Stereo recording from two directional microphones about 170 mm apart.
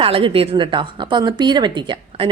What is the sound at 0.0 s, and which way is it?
A woman's voice, 30° right (ahead or behind).